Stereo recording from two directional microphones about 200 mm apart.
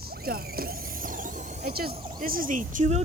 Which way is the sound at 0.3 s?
50° right (ahead or behind).